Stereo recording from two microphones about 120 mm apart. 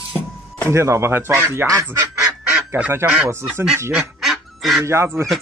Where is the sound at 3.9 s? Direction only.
Centre (ahead or behind).